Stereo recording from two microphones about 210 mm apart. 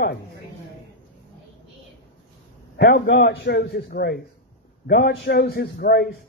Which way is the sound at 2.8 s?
50° left (ahead or behind).